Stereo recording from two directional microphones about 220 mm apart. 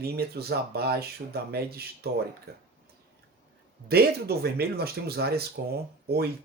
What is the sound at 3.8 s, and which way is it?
Speech, 45° right (ahead or behind).